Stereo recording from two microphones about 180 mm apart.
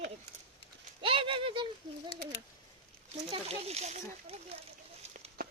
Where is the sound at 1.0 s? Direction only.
30° right (ahead or behind).